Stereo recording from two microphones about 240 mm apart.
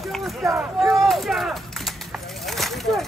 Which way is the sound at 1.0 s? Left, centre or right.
Centre.